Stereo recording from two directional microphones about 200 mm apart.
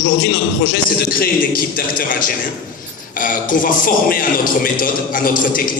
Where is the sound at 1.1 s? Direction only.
45° left (ahead or behind).